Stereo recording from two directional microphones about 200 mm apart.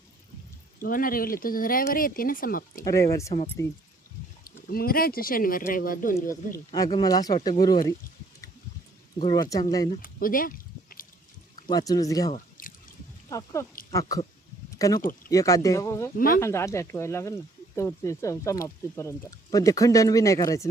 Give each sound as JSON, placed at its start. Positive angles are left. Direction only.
{"t": 0.8, "sound": "speech", "side_deg": 45}
{"t": 2.8, "sound": "speech", "side_deg": 15}
{"t": 4.4, "sound": "speech", "side_deg": 50}
{"t": 6.7, "sound": "speech", "side_deg": 20}
{"t": 9.2, "sound": "speech", "side_deg": 20}
{"t": 10.0, "sound": "a sound", "side_deg": 45}
{"t": 11.7, "sound": "speech", "side_deg": 20}
{"t": 12.3, "sound": "drip", "side_deg": 45}
{"t": 13.3, "sound": "speech", "side_deg": 15}
{"t": 16.1, "sound": "speech", "side_deg": 45}
{"t": 16.4, "sound": "speech", "side_deg": 15}